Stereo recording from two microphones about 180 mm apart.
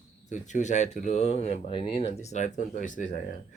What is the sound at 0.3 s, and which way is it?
Speech, 40° left (ahead or behind).